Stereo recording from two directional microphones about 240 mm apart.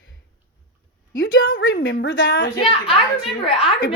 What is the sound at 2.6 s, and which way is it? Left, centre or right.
Speech, left.